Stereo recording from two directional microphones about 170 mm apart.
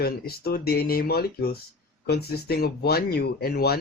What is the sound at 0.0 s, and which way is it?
Speech, 65° left (ahead or behind).